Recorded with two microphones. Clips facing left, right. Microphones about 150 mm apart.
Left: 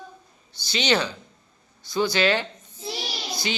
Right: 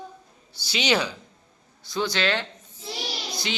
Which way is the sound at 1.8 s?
Centre (ahead or behind).